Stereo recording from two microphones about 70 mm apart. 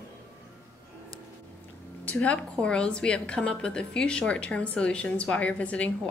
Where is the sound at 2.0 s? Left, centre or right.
Centre.